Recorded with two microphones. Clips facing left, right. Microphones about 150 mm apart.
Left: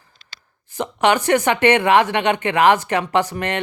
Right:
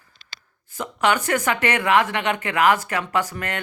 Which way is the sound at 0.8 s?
25° left (ahead or behind).